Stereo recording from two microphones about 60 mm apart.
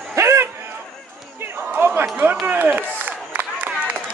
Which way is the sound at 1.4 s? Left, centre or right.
Right.